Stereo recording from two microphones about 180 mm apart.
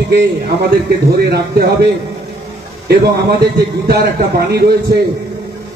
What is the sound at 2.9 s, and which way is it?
A man's voice, 65° right (ahead or behind).